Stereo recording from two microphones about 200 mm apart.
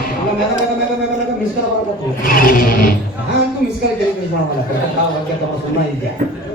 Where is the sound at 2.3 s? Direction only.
45° left (ahead or behind).